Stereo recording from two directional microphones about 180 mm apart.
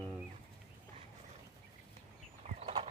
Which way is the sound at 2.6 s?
30° right (ahead or behind).